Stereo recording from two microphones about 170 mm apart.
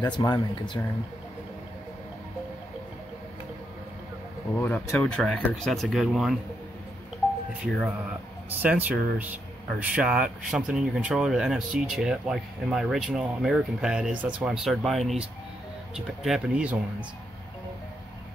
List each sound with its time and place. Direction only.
0.0 s speech: 25° left (ahead or behind)
4.6 s speech: 10° left (ahead or behind)
8.5 s speech: 10° right (ahead or behind)